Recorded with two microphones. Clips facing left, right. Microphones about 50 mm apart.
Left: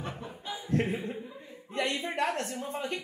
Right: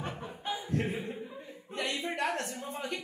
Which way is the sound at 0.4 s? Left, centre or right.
Right.